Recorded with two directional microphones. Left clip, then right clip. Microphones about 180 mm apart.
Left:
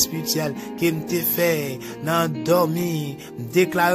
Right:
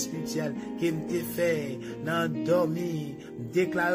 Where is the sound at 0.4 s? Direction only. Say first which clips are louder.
Left 5 dB; 55° left (ahead or behind).